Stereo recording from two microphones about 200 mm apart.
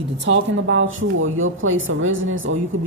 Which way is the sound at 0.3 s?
70° right (ahead or behind).